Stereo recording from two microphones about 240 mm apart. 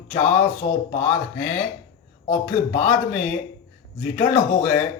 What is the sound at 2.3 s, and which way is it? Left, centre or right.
Speech, left.